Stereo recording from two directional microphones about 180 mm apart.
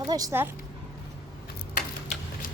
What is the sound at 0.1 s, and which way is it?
Speech, 20° right (ahead or behind).